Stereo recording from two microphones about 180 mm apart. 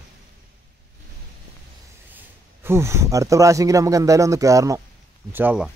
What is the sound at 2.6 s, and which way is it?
A man's voice, 15° right (ahead or behind).